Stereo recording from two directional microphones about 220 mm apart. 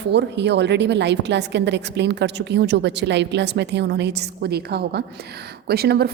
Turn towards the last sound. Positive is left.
turn(degrees=-45)  # may be behind; listen again after turning